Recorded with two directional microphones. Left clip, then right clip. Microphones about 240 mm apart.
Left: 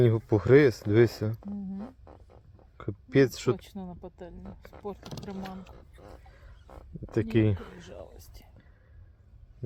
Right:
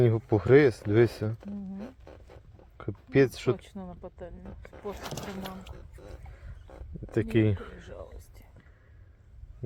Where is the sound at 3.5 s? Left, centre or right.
Left.